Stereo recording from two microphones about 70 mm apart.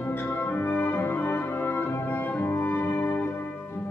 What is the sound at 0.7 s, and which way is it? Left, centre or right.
Music, left.